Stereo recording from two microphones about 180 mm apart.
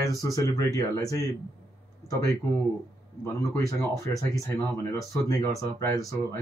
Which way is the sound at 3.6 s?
15° left (ahead or behind).